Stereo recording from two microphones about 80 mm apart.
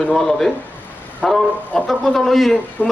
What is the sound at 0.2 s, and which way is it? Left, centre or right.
Speech, centre.